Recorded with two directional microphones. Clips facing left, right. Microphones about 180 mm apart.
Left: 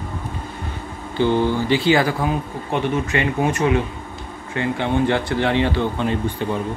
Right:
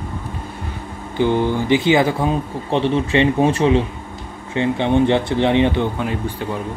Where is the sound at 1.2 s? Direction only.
15° right (ahead or behind).